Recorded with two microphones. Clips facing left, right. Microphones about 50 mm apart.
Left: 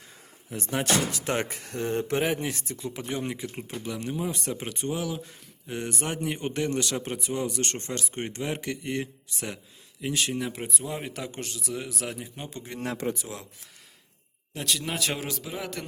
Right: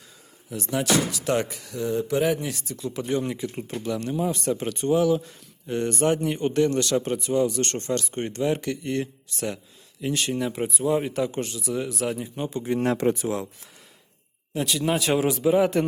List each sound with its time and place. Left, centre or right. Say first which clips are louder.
0.5 s speech: right 3 dB; left
2.2 s speech: right 3 dB; left
3.0 s speech: right 7 dB; centre
13.1 s speech: right 11 dB; right
14.5 s a man's voice: right 7 dB; centre; by 15.8 s right